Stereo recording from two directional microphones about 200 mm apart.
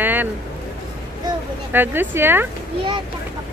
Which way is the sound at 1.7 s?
10° right (ahead or behind).